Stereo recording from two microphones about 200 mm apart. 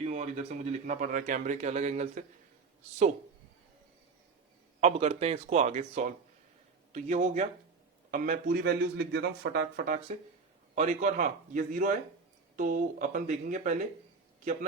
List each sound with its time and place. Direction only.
0.0 s speech: 35° right (ahead or behind)
4.8 s a man's voice: 30° right (ahead or behind)